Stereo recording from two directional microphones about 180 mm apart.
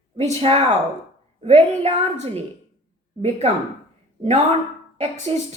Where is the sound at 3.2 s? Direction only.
40° right (ahead or behind).